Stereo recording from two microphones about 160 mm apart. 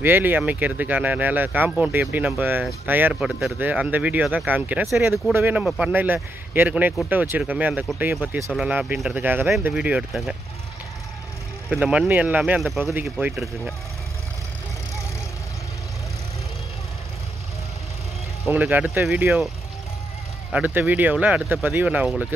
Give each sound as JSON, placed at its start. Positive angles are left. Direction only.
{"t": 0.0, "sound": "speech", "side_deg": -10}
{"t": 11.7, "sound": "speech", "side_deg": -10}
{"t": 18.5, "sound": "speech", "side_deg": -10}
{"t": 20.5, "sound": "speech", "side_deg": -10}